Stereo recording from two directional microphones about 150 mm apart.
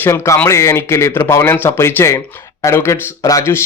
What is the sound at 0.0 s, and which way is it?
Speech, 15° left (ahead or behind).